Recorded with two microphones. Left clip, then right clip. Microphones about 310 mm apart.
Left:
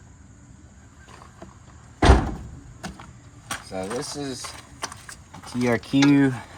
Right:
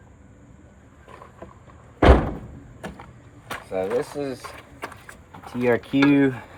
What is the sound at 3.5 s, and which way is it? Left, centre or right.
Speech, left.